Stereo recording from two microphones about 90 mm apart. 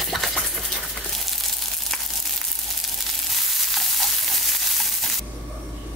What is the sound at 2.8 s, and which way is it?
Frying, centre (ahead or behind).